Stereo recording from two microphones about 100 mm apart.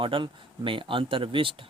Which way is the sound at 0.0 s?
60° right (ahead or behind).